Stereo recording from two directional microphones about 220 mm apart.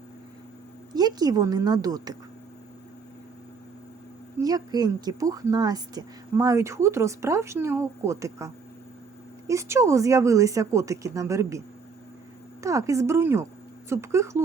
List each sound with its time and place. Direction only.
0.9 s a woman's voice: 15° right (ahead or behind)
4.4 s a woman's voice: 15° right (ahead or behind)
12.6 s a woman's voice: 15° right (ahead or behind)